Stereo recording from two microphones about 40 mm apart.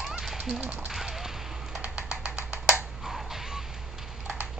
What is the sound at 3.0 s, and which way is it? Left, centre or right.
Music, centre.